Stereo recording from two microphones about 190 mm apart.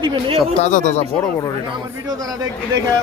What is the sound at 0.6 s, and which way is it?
Speech, 40° left (ahead or behind).